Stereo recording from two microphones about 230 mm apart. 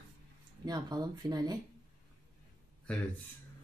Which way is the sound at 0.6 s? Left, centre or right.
Centre.